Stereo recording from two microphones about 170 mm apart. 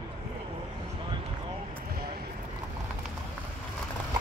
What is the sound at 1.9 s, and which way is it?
Vehicle, 60° right (ahead or behind).